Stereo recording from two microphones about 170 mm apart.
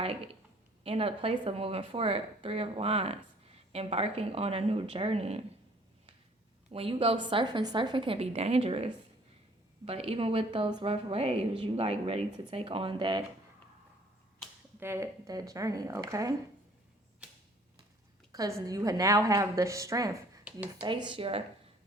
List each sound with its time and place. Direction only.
0.9 s speech: 35° right (ahead or behind)
6.7 s speech: 35° right (ahead or behind)
14.8 s a woman's voice: 15° right (ahead or behind)
18.3 s a woman's voice: 20° right (ahead or behind)
20.4 s speech: 10° right (ahead or behind)
20.8 s a woman's voice: 30° right (ahead or behind)